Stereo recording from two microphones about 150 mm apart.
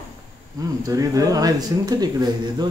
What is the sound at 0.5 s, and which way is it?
Speech, 25° right (ahead or behind).